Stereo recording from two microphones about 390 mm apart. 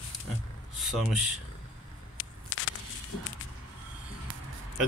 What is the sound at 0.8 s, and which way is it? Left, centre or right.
Speech, centre.